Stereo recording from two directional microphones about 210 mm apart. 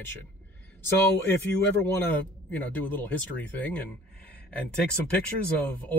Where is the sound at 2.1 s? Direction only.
10° left (ahead or behind).